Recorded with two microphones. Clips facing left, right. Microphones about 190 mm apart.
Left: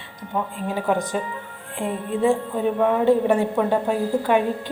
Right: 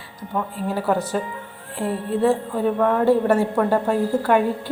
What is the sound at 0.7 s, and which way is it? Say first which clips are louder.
Speech: right 1 dB; 15° left (ahead or behind).